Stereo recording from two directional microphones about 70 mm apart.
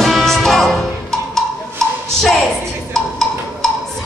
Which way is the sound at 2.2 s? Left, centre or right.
Centre.